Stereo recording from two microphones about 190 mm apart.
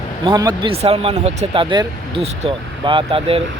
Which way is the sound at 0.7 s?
30° right (ahead or behind).